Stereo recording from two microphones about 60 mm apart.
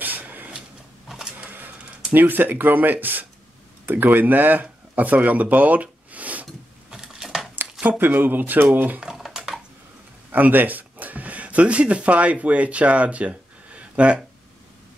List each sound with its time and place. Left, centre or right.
0.0 s a sound: right
1.0 s printer: centre
1.4 s printer: right
2.1 s speech: right
6.9 s a sound: centre
8.0 s speech: right
9.0 s typing: centre
10.3 s speech: right